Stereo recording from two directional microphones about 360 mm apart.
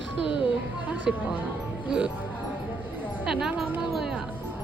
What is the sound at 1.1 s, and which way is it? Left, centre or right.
Speech, centre.